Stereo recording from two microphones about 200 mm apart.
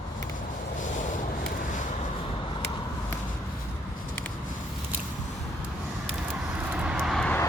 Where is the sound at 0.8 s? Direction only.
40° left (ahead or behind).